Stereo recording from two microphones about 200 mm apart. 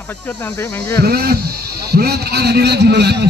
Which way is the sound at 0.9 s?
50° right (ahead or behind).